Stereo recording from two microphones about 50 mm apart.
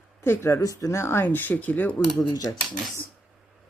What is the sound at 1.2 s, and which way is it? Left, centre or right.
Speech, left.